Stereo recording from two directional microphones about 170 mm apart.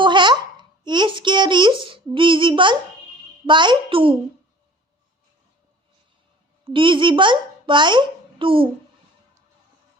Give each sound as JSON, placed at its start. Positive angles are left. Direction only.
{"t": 0.0, "sound": "a sound", "side_deg": -25}
{"t": 0.9, "sound": "child singing", "side_deg": -30}
{"t": 3.4, "sound": "a child's voice", "side_deg": -25}
{"t": 6.7, "sound": "a child's voice", "side_deg": -30}